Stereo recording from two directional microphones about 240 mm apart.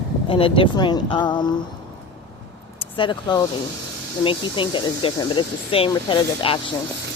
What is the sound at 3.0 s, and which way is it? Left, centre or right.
Speech, centre.